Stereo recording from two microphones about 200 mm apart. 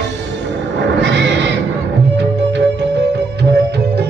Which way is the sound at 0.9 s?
60° right (ahead or behind).